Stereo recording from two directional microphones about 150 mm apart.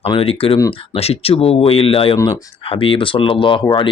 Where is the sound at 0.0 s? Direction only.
40° left (ahead or behind).